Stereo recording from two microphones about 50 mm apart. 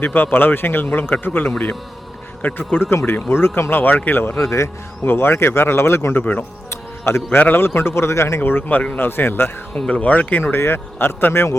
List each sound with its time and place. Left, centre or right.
0.0 s a man's voice: left
2.4 s speech: left
3.2 s a man's voice: left
3.8 s speech: left
4.1 s a man's voice: left
4.4 s speech: left
5.0 s speech: left
7.0 s a man's voice: left
8.4 s a man's voice: left
9.9 s speech: left
10.4 s a man's voice: left